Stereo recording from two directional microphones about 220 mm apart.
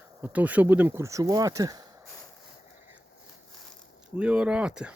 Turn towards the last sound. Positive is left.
turn(degrees=-5)  # may be behind; listen again after turning